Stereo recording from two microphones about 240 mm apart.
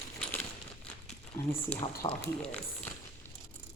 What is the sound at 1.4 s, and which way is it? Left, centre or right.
Speech, centre.